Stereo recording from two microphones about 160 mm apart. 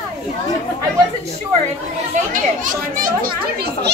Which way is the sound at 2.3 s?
55° right (ahead or behind).